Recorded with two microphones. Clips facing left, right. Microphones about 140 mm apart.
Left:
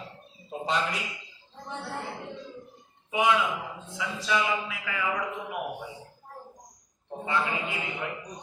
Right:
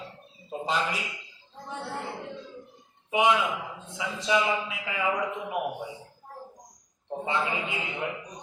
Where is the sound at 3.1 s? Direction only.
20° right (ahead or behind).